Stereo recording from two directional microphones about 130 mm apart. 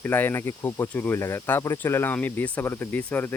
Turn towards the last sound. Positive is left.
turn(degrees=15)  # may be behind; listen again after turning